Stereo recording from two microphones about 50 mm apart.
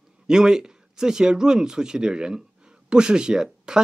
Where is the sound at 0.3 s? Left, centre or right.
Centre.